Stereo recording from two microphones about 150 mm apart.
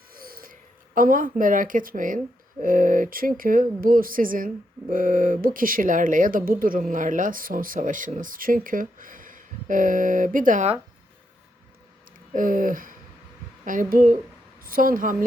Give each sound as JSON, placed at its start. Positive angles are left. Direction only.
{"t": 0.1, "sound": "a sound", "side_deg": -75}
{"t": 0.9, "sound": "speech", "side_deg": -65}
{"t": 12.3, "sound": "a woman's voice", "side_deg": -60}